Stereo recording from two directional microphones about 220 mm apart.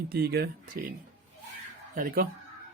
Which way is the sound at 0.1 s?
45° right (ahead or behind).